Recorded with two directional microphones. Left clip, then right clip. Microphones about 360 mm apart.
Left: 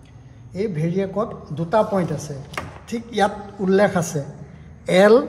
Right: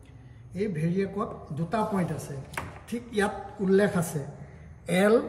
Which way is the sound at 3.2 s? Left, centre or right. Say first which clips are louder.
Left 9 dB; centre.